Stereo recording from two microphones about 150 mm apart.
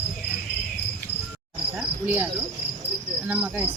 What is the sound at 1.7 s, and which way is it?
Insect, 10° right (ahead or behind).